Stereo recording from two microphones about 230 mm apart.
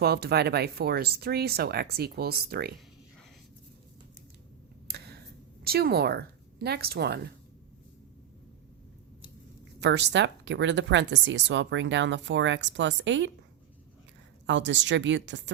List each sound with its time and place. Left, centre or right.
0.0 s speech: right
4.9 s a sound: right
5.6 s speech: right
9.8 s speech: right
14.4 s speech: right